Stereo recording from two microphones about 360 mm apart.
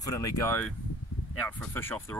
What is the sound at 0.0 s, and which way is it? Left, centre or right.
Speech, centre.